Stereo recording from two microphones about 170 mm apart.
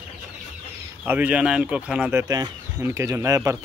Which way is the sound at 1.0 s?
10° right (ahead or behind).